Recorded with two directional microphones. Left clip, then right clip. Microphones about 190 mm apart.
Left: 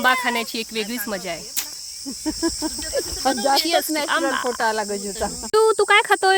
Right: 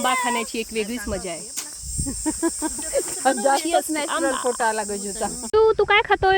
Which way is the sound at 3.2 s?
35° left (ahead or behind).